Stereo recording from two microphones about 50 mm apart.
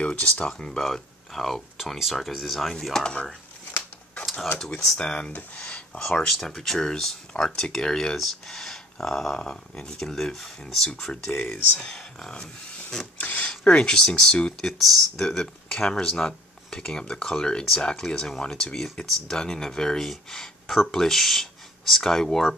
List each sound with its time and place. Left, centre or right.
0.0 s speech: left; by 2.7 s centre
2.7 s speech: centre
3.7 s a sound: left
4.6 s speech: centre
11.3 s speech: left
11.9 s speech: centre
13.0 s a sound: left
13.5 s speech: left
14.6 s speech: centre